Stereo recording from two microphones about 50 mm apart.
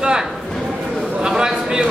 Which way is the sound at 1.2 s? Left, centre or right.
Centre.